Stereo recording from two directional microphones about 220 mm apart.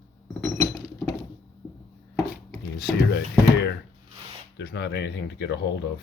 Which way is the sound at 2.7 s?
45° left (ahead or behind).